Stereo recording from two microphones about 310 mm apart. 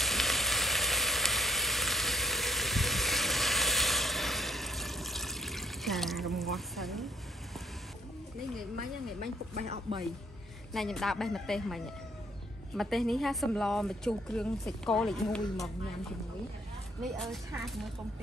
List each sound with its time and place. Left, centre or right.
0.0 s sizzle: centre
9.2 s speech: right
10.7 s a woman's voice: centre
17.0 s a woman's voice: centre